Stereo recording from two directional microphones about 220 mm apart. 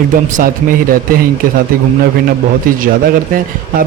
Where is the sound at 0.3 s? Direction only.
40° right (ahead or behind).